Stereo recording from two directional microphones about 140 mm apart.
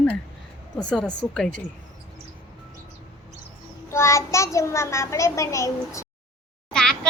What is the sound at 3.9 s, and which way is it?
A child's voice, 20° left (ahead or behind).